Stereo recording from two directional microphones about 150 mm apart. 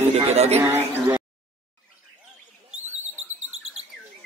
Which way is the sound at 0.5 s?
15° right (ahead or behind).